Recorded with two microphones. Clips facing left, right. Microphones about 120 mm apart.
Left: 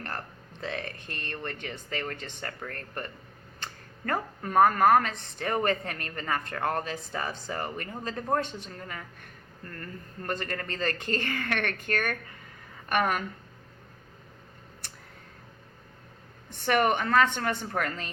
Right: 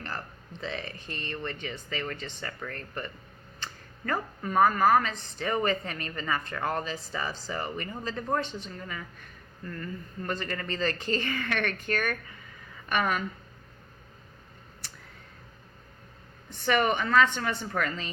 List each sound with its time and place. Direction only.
0.6 s speech: 55° left (ahead or behind)
16.6 s speech: 50° left (ahead or behind)